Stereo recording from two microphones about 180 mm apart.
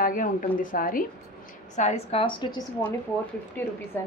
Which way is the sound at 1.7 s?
35° left (ahead or behind).